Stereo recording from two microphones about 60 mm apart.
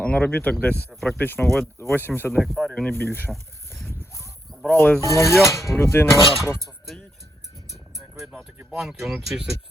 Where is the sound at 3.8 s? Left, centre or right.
Left.